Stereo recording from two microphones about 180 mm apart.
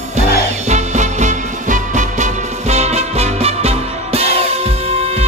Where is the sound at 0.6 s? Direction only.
40° right (ahead or behind).